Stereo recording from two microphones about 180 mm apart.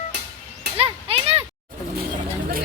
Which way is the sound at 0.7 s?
30° right (ahead or behind).